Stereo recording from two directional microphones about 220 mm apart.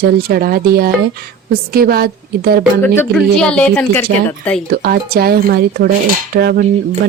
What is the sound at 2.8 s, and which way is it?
Speech, 10° left (ahead or behind).